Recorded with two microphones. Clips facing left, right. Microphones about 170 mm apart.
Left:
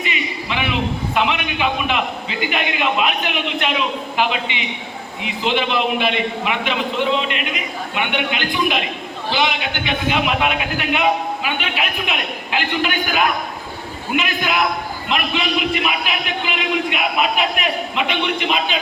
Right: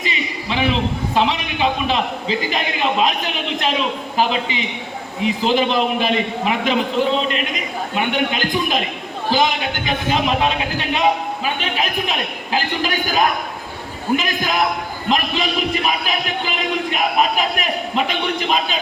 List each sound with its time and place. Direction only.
0.0 s a man's voice: 35° right (ahead or behind)